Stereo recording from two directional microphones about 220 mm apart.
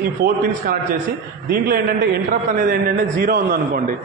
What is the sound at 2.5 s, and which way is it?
A man's voice, 40° right (ahead or behind).